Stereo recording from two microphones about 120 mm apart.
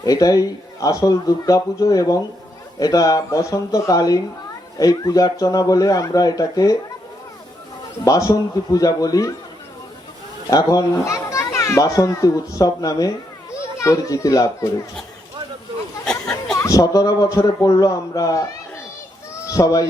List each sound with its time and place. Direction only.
0.0 s a child's voice: 30° left (ahead or behind)
8.0 s speech: 30° left (ahead or behind)
10.5 s a child's voice: 30° left (ahead or behind)
16.0 s a sound: 5° left (ahead or behind)
16.6 s a child's voice: 25° left (ahead or behind)
19.5 s a child's voice: 30° left (ahead or behind)